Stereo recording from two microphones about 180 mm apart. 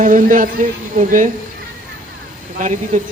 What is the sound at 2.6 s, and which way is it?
Speech, 45° right (ahead or behind).